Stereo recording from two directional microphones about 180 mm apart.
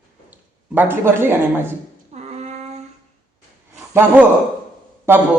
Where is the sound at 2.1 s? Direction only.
40° right (ahead or behind).